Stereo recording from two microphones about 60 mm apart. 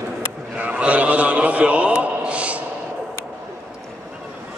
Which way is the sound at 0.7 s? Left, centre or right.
Right.